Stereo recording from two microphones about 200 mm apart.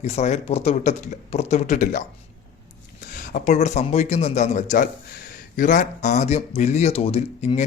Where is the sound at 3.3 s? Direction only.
35° left (ahead or behind).